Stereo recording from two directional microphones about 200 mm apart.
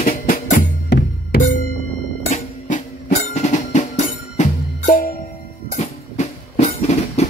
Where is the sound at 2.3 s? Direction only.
40° left (ahead or behind).